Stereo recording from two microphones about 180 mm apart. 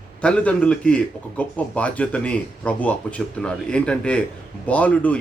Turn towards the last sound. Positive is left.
turn(degrees=10)  # may be behind; listen again after turning